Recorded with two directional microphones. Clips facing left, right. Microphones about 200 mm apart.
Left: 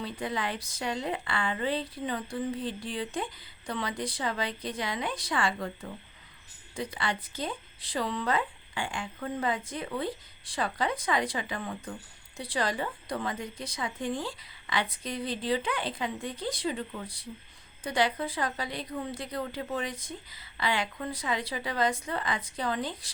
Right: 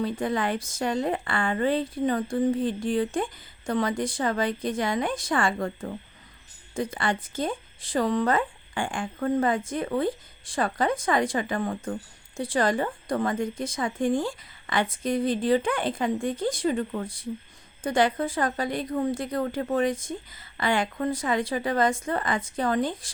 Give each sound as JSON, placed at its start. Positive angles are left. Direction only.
{"t": 0.0, "sound": "a woman's voice", "side_deg": -50}